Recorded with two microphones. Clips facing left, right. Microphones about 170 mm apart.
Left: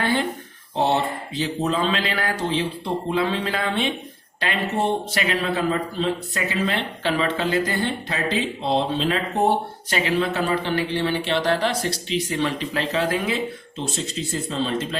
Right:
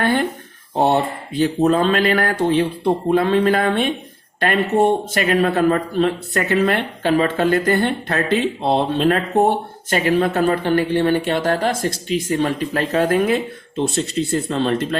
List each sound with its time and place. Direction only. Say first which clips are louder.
0.0 s a man's voice: right 4 dB; 55° right (ahead or behind)